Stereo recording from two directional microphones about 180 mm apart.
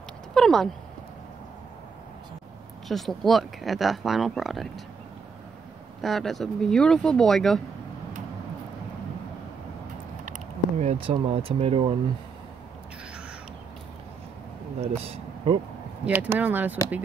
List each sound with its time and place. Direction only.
0.3 s speech: centre (ahead or behind)
2.9 s speech: centre (ahead or behind)
5.9 s speech: centre (ahead or behind)
10.2 s speech: 40° right (ahead or behind)
15.0 s speech: 30° right (ahead or behind)
16.1 s speech: 10° right (ahead or behind)